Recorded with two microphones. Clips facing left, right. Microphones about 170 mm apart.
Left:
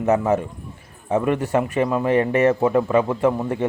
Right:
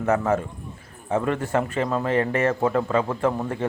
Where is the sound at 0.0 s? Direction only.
20° left (ahead or behind).